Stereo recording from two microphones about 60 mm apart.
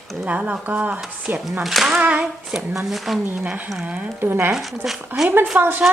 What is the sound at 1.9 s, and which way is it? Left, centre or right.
Speech, centre.